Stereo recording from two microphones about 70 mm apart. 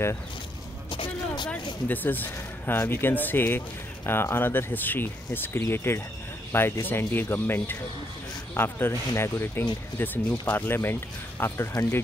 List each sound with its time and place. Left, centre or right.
1.9 s speech: left